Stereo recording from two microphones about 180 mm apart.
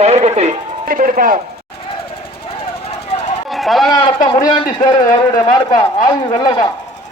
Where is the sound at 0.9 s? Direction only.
50° right (ahead or behind).